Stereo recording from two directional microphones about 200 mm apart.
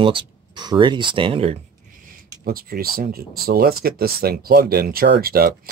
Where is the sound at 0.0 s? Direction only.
25° right (ahead or behind).